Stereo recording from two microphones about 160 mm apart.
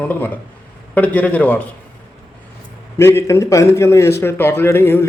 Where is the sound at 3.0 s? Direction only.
15° left (ahead or behind).